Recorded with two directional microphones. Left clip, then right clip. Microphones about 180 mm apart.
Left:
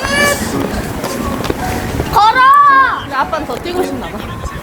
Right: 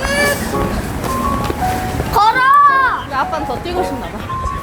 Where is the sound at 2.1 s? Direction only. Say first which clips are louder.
Left 3 dB; 35° right (ahead or behind).